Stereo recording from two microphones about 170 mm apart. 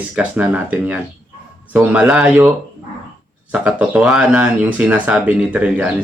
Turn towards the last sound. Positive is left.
turn(degrees=-5)  # may be behind; listen again after turning